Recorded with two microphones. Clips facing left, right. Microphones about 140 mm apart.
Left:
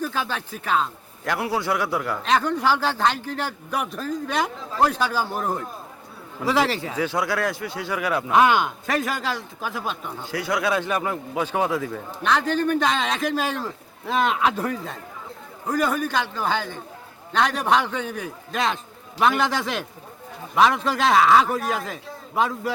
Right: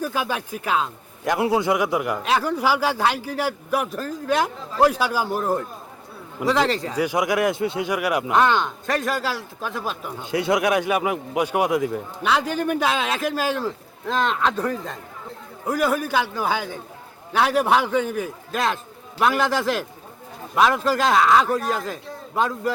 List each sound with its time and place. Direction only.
0.0 s a man's voice: 10° right (ahead or behind); by 6.9 s 5° left (ahead or behind)
6.9 s a man's voice: 15° right (ahead or behind)
8.3 s speech: 10° left (ahead or behind)
10.2 s a man's voice: 20° right (ahead or behind); by 14.9 s 5° left (ahead or behind)
15.6 s a man's voice: 10° right (ahead or behind)